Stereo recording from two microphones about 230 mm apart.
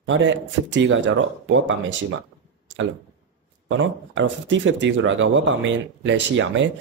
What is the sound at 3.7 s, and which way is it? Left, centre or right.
Speech, right.